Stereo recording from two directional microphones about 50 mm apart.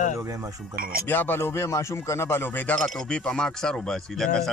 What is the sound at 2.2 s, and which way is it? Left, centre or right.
Speech, left.